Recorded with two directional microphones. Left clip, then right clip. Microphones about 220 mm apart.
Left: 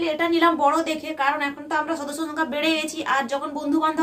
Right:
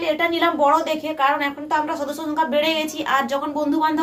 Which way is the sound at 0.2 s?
20° left (ahead or behind).